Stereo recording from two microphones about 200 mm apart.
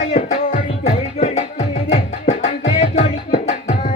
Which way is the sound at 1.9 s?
35° left (ahead or behind).